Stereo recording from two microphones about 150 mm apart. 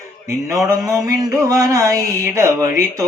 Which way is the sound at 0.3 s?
20° right (ahead or behind).